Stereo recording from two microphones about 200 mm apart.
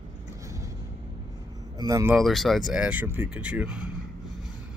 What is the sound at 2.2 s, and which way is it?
Speech, centre (ahead or behind).